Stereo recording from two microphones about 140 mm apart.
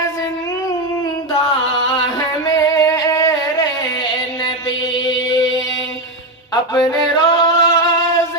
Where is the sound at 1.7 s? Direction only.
25° left (ahead or behind).